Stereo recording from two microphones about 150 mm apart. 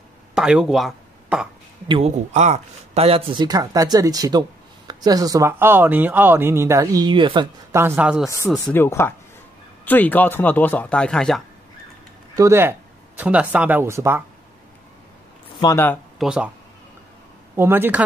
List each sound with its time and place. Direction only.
0.3 s speech: 5° right (ahead or behind)
1.9 s speech: 40° right (ahead or behind)
7.7 s speech: 15° right (ahead or behind)
8.6 s speech: 15° left (ahead or behind)
12.4 s speech: 15° right (ahead or behind)
15.6 s speech: 15° left (ahead or behind)
16.2 s speech: 5° right (ahead or behind)
17.6 s speech: 15° right (ahead or behind)